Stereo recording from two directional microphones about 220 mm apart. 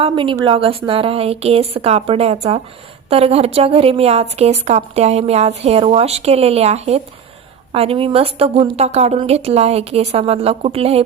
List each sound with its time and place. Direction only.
0.0 s a woman's voice: 25° right (ahead or behind)